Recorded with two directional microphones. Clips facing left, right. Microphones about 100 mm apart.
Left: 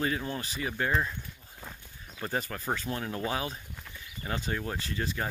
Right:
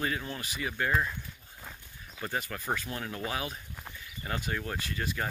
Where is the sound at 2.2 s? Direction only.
35° left (ahead or behind).